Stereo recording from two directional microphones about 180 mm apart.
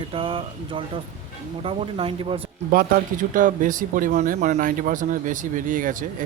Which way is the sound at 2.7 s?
50° right (ahead or behind).